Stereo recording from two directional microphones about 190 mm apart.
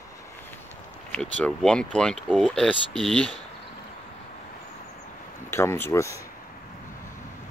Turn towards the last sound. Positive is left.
turn(degrees=15)  # may be behind; listen again after turning